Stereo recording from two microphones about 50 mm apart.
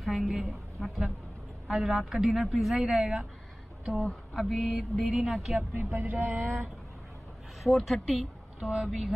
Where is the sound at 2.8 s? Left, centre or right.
Centre.